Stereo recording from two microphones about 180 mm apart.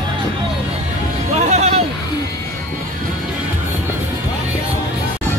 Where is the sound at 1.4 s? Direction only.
40° right (ahead or behind).